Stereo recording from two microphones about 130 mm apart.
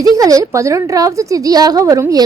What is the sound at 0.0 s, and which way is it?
A woman's voice, 25° right (ahead or behind).